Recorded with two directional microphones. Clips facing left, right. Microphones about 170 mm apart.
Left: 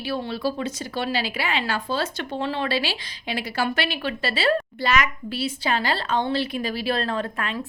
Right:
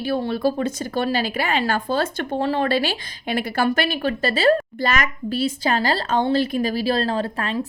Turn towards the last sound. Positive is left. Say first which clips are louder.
# right 4 dB
turn(degrees=-35)  # may be behind; listen again after turning